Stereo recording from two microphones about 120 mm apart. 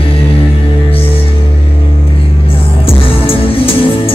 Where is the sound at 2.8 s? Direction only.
50° left (ahead or behind).